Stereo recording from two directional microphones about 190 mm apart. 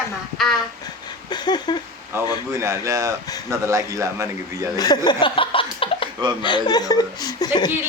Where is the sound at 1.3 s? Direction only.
20° left (ahead or behind).